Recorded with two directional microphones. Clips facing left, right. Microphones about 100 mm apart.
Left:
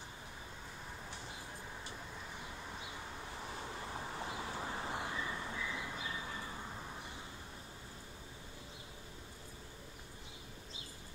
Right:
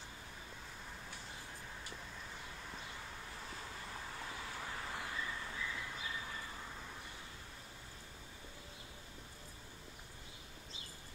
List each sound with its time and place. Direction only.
3.4 s vehicle: 25° left (ahead or behind)